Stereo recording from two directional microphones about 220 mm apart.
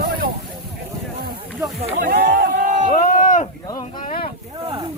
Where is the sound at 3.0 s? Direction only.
35° left (ahead or behind).